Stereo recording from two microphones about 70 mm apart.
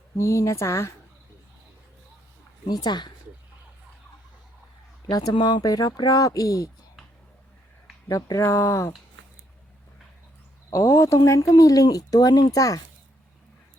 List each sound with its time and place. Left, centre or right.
0.2 s speech: left
2.6 s speech: left
5.1 s speech: left
8.1 s speech: left
10.7 s speech: left